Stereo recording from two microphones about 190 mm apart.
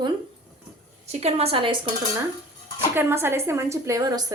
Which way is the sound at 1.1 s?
35° right (ahead or behind).